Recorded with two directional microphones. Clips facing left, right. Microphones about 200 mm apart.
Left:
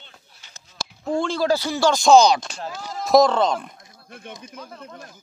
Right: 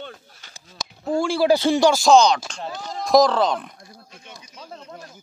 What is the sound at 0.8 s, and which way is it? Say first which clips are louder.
Speech: right 1 dB; 5° right (ahead or behind).